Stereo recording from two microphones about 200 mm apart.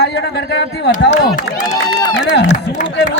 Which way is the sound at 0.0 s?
55° left (ahead or behind).